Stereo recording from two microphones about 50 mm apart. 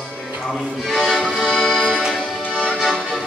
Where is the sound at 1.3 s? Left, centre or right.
Centre.